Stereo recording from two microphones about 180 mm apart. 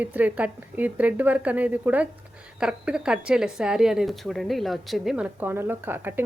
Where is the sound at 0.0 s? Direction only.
10° right (ahead or behind).